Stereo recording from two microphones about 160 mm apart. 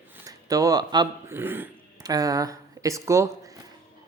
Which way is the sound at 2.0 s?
25° right (ahead or behind).